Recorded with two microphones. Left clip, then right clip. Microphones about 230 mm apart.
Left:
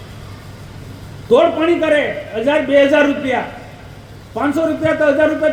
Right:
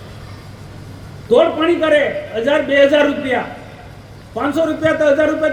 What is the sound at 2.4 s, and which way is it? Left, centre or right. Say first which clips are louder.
Speech: even; left.